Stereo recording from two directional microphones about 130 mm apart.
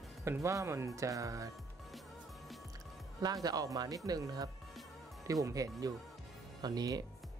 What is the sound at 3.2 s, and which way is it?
A man's voice, 30° right (ahead or behind).